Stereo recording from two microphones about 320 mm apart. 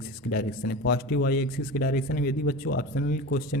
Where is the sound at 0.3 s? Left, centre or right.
Left.